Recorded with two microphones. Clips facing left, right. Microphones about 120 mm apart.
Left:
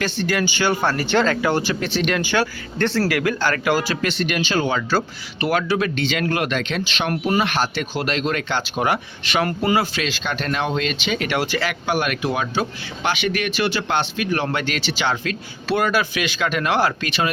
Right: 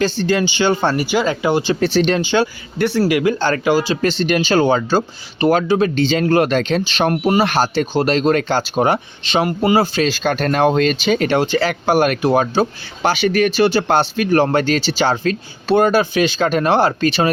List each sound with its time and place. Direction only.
0.0 s speech: 30° right (ahead or behind)
0.9 s speech: 10° right (ahead or behind)
1.7 s speech: 35° right (ahead or behind)
2.2 s speech: 20° right (ahead or behind)
3.7 s speech: 15° right (ahead or behind)
4.0 s speech: 35° right (ahead or behind)